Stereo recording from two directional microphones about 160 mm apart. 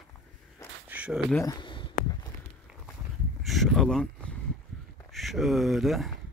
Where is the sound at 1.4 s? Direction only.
25° left (ahead or behind).